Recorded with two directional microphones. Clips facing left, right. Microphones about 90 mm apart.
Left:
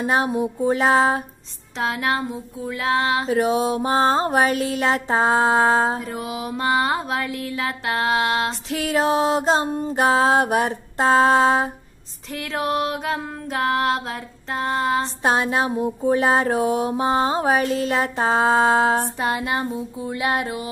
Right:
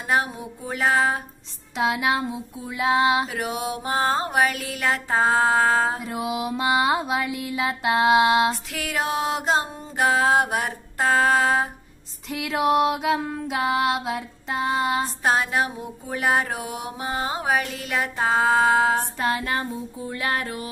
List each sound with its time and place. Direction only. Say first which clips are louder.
0.0 s music: left 4 dB; 30° left (ahead or behind)
1.8 s music: even; 10° right (ahead or behind)
3.3 s music: left 8 dB; 30° left (ahead or behind)
6.0 s music: right 1 dB; 10° right (ahead or behind)
8.6 s music: left 6 dB; 30° left (ahead or behind)
12.3 s music: right 3 dB; 5° right (ahead or behind)
15.2 s mantra: left 2 dB; 25° left (ahead or behind)
19.1 s female singing: left 1 dB; 15° left (ahead or behind)
20.1 s music: left 4 dB; 20° left (ahead or behind)